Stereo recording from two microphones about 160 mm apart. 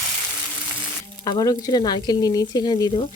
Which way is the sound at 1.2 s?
25° left (ahead or behind).